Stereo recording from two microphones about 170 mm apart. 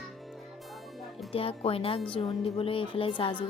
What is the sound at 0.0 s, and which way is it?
Music, centre (ahead or behind).